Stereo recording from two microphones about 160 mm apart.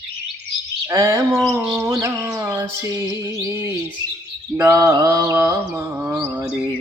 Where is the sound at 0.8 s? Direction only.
15° right (ahead or behind).